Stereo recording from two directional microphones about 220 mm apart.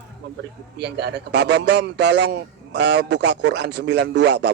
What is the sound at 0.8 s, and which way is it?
A man's voice, 50° right (ahead or behind).